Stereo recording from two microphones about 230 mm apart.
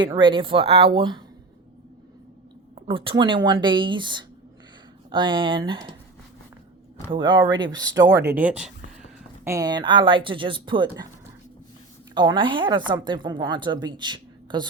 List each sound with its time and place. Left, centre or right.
0.0 s a woman's voice: right
2.7 s a woman's voice: right
7.1 s a woman's voice: centre
12.1 s a woman's voice: centre